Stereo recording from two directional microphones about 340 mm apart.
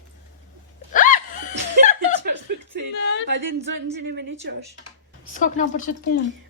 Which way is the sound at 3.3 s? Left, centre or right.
Right.